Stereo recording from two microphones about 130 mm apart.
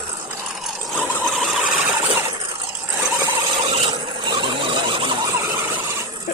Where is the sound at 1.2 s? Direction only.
Centre (ahead or behind).